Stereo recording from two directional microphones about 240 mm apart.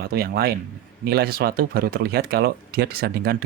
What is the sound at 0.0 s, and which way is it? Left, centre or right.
Speech, right.